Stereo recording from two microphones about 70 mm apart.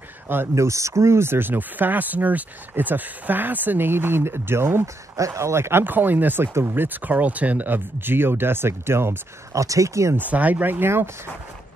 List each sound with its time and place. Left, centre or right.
0.6 s speech: right
5.1 s speech: right
9.6 s speech: right
10.1 s speech: right